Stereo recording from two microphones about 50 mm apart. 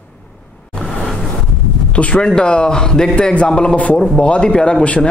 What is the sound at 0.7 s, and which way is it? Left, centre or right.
Vehicle, centre.